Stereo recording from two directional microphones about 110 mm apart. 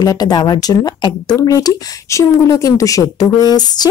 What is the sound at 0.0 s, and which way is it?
Speech, 35° left (ahead or behind).